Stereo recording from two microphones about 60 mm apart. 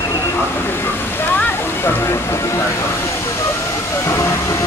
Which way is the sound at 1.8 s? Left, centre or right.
Left.